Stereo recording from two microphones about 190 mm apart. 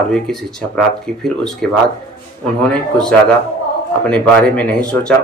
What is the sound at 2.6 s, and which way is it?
Speech, 5° left (ahead or behind).